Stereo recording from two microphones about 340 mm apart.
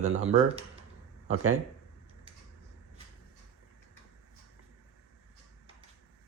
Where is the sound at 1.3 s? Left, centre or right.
Right.